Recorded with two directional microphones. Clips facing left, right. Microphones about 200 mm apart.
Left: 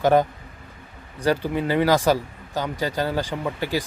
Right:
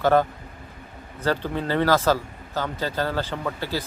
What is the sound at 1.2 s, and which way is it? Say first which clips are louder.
Speech: left 3 dB; 15° left (ahead or behind).